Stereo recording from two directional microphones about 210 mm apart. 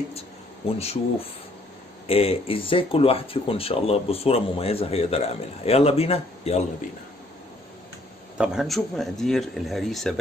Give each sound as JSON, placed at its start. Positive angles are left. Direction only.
{"t": 0.7, "sound": "speech", "side_deg": 30}
{"t": 8.4, "sound": "speech", "side_deg": 0}